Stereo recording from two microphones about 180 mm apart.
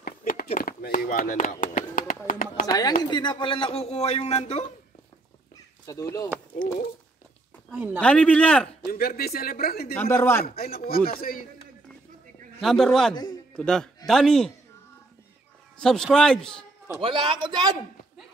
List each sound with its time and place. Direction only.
0.0 s a sound: 55° left (ahead or behind)
0.6 s speech: 50° left (ahead or behind)
2.6 s speech: 20° left (ahead or behind); by 4.6 s 40° left (ahead or behind)
5.9 s a man's voice: 20° left (ahead or behind)
8.0 s a man's voice: 5° left (ahead or behind)
8.9 s speech: 60° left (ahead or behind)
9.9 s a man's voice: 10° left (ahead or behind)
10.4 s a man's voice: 55° left (ahead or behind)
12.6 s a man's voice: centre (ahead or behind)
15.8 s a man's voice: 5° left (ahead or behind)
17.0 s a man's voice: 25° right (ahead or behind)